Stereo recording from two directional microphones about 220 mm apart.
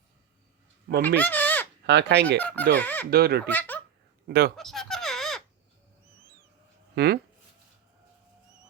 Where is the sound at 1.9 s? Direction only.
50° right (ahead or behind).